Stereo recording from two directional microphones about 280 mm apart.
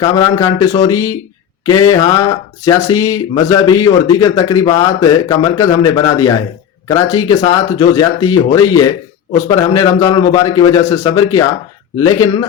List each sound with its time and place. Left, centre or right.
0.0 s a man's voice: centre